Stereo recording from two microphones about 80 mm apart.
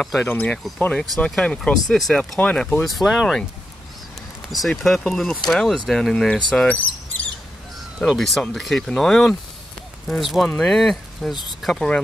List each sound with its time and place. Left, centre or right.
0.0 s speech: centre
0.3 s speech: centre
4.5 s speech: centre
8.2 s speech: centre